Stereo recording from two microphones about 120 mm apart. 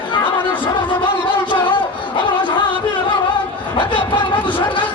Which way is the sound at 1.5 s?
45° left (ahead or behind).